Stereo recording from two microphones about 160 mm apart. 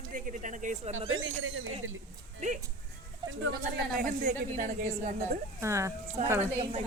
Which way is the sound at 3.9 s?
55° right (ahead or behind).